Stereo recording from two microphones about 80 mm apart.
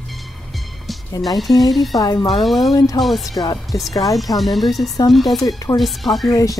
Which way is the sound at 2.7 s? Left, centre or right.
Left.